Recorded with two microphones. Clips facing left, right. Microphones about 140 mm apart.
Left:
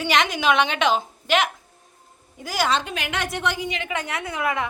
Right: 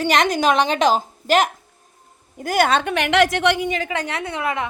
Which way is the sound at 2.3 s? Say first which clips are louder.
Right 5 dB; 55° right (ahead or behind).